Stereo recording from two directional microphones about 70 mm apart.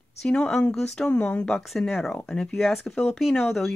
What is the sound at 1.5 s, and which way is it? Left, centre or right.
Speech, centre.